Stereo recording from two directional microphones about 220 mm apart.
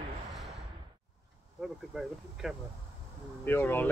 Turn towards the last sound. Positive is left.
turn(degrees=10)  # may be behind; listen again after turning